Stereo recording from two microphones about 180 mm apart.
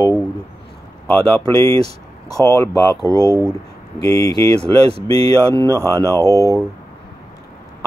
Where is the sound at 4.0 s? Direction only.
20° left (ahead or behind).